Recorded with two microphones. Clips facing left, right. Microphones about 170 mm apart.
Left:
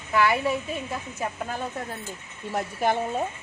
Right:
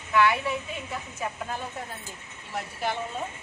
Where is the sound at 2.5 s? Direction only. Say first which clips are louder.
Left 6 dB; 45° left (ahead or behind).